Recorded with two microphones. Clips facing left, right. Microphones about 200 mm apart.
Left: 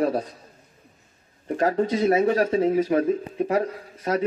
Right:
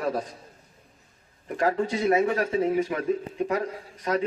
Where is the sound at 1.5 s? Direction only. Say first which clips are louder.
Left 3 dB; 35° left (ahead or behind).